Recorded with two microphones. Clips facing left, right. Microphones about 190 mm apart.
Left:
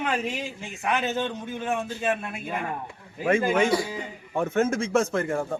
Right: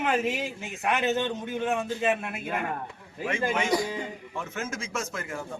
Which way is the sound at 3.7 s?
5° left (ahead or behind).